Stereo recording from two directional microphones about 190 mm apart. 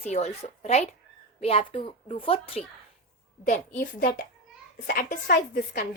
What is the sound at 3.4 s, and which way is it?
A woman's voice, 40° left (ahead or behind).